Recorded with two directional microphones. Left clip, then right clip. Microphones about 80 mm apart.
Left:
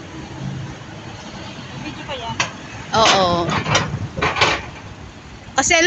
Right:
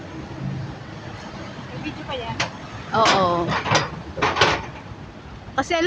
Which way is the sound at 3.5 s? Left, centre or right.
Left.